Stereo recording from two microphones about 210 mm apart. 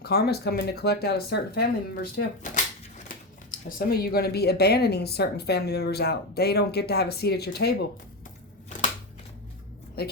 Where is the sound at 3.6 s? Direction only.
45° left (ahead or behind).